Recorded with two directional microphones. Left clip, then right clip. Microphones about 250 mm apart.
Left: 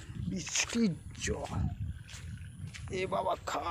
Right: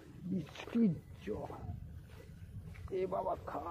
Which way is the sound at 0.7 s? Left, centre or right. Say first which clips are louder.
Left 2 dB; centre.